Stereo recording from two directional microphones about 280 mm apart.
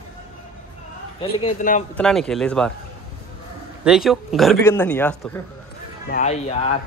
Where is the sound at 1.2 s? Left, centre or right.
Left.